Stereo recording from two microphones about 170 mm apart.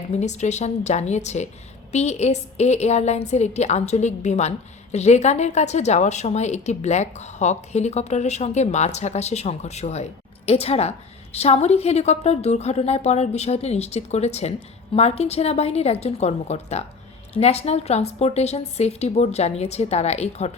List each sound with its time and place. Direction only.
0.1 s a woman's voice: 40° left (ahead or behind)